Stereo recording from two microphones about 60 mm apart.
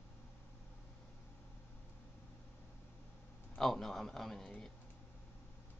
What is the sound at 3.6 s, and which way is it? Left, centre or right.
A man's voice, centre.